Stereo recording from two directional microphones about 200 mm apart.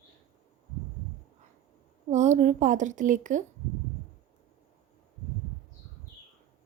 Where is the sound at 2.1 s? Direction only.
35° right (ahead or behind).